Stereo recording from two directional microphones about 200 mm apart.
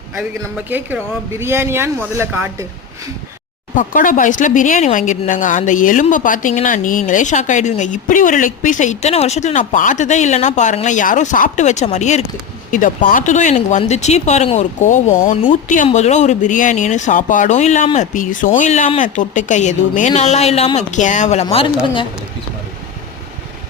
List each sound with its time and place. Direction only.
0.2 s speech: 10° right (ahead or behind)
3.8 s speech: 40° left (ahead or behind)